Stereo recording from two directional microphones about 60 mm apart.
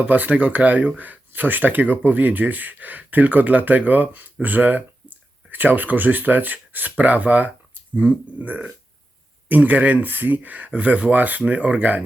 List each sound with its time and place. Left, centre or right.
0.0 s speech: right